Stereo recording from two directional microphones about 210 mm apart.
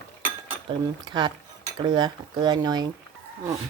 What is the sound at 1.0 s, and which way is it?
Speech, 20° right (ahead or behind).